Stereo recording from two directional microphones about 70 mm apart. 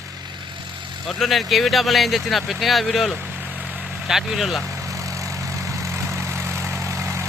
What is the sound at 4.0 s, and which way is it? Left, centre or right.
Speech, centre.